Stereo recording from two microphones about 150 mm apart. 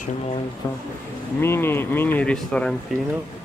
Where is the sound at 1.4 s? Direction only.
15° left (ahead or behind).